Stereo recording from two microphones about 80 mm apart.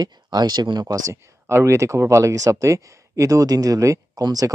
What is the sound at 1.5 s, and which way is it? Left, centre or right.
Speech, right.